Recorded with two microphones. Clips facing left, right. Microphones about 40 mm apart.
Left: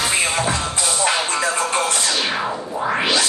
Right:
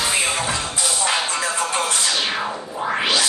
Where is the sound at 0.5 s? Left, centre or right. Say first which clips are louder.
Left 2 dB; left.